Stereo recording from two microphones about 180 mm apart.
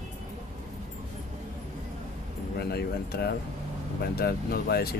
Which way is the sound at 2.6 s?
60° left (ahead or behind).